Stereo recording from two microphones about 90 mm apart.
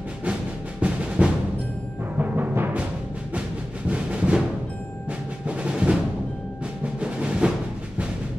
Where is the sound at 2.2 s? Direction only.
20° right (ahead or behind).